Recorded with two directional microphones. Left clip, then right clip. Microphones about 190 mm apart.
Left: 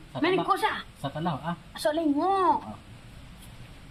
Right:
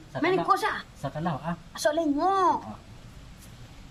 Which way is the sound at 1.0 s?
15° right (ahead or behind).